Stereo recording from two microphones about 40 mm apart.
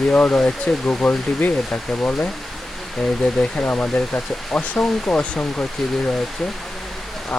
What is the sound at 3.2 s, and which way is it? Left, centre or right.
Speech, left.